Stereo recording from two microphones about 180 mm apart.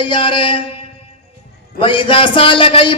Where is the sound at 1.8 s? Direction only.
30° left (ahead or behind).